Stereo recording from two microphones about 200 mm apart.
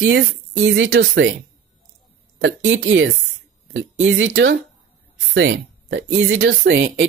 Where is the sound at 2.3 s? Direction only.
75° right (ahead or behind).